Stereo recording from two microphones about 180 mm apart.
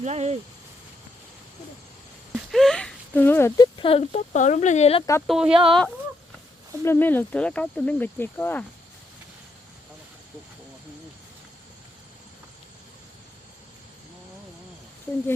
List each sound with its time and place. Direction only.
0.0 s speech: 35° right (ahead or behind)
2.3 s a sound: centre (ahead or behind)
3.8 s speech: 30° left (ahead or behind)
4.3 s speech: 45° left (ahead or behind)
5.3 s speech: 5° right (ahead or behind)
6.8 s speech: 10° left (ahead or behind)